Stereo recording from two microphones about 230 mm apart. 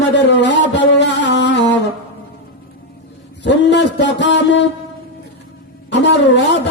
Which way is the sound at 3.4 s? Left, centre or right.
Left.